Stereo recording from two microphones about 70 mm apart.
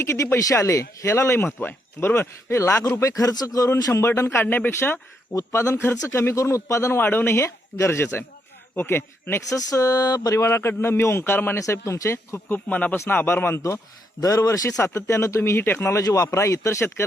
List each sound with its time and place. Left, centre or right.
0.0 s speech: left
3.0 s a sound: left
4.0 s a man's voice: left
4.7 s speech: left
7.0 s a man's voice: left
9.5 s a sound: left
10.4 s speech: left
11.6 s speech: left
12.5 s a man's voice: left
14.2 s speech: left
14.8 s speech: left
16.0 s a sound: left
16.3 s speech: left